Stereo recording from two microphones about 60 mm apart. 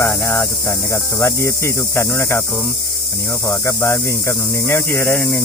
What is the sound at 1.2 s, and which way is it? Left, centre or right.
Snake, left.